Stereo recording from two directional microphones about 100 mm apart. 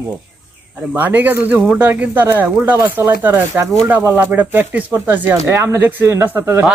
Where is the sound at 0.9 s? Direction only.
20° right (ahead or behind).